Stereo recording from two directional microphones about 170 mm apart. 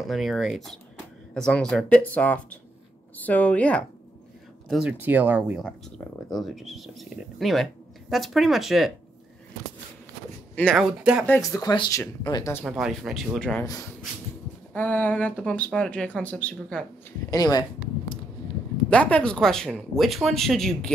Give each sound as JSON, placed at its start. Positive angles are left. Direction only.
{"t": 0.0, "sound": "speech", "side_deg": 0}
{"t": 4.6, "sound": "speech", "side_deg": -5}
{"t": 10.7, "sound": "speech", "side_deg": -5}
{"t": 11.2, "sound": "speech", "side_deg": 15}
{"t": 12.6, "sound": "speech", "side_deg": 0}
{"t": 14.7, "sound": "speech", "side_deg": 10}
{"t": 17.3, "sound": "speech", "side_deg": 25}
{"t": 18.9, "sound": "speech", "side_deg": 5}